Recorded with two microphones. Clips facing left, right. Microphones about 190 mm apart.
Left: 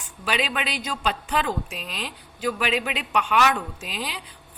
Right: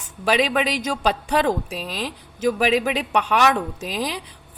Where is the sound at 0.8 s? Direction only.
40° right (ahead or behind).